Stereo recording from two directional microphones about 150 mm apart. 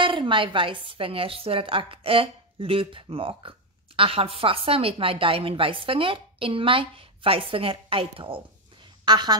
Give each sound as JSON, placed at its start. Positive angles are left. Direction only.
{"t": 0.0, "sound": "a woman's voice", "side_deg": -35}